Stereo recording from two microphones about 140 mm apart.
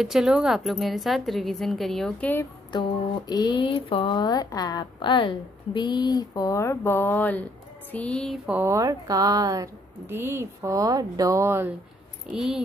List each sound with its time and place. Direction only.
0.0 s speech: 5° right (ahead or behind)
2.7 s speech: 30° left (ahead or behind); by 7.4 s 10° left (ahead or behind)
7.9 s a sound: 10° left (ahead or behind)
8.5 s a woman's voice: 15° right (ahead or behind)
12.3 s speech: 5° right (ahead or behind)